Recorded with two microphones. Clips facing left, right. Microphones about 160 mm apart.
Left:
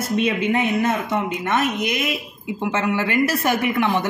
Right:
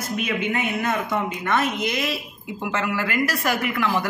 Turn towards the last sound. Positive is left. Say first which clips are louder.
# left 3 dB
turn(degrees=25)  # may be behind; listen again after turning